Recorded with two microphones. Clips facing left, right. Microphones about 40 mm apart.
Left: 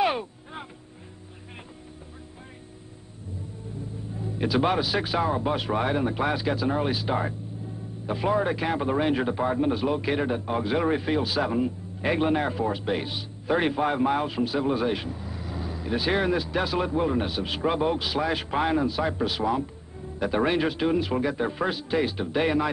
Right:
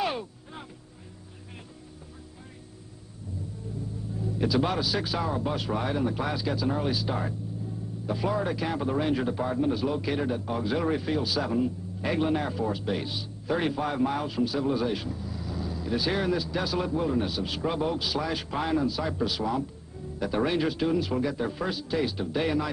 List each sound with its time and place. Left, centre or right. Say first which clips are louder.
0.0 s vehicle: left 5 dB; left
4.2 s a man's voice: left 2 dB; left